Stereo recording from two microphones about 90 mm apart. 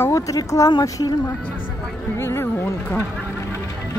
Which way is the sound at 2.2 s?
30° left (ahead or behind).